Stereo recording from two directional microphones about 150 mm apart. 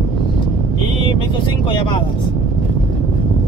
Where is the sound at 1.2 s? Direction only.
35° left (ahead or behind).